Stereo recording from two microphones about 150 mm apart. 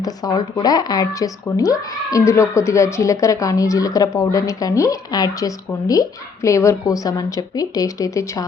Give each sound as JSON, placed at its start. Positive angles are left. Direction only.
{"t": 0.0, "sound": "speech", "side_deg": 25}